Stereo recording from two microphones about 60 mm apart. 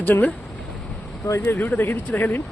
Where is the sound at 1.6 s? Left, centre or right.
Left.